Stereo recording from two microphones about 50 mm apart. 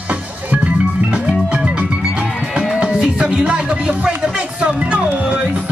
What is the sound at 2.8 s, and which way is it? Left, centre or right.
Music, right.